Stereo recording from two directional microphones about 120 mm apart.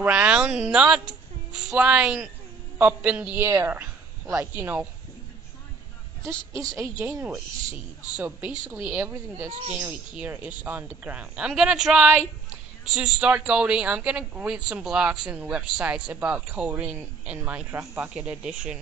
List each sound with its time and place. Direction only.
0.0 s a woman's voice: 10° right (ahead or behind)
3.4 s a woman's voice: 20° right (ahead or behind)
6.2 s a woman's voice: 25° right (ahead or behind)
7.0 s speech: 15° right (ahead or behind)